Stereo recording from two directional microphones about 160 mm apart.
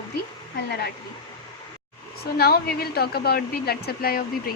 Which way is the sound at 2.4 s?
75° left (ahead or behind).